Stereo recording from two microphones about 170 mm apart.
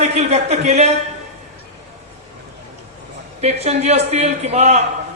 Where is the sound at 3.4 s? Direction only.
40° right (ahead or behind).